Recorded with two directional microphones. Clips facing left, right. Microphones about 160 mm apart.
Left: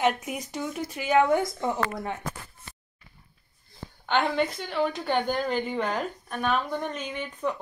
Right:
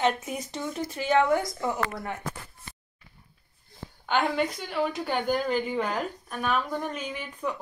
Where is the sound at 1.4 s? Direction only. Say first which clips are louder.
Left 2 dB; 25° left (ahead or behind).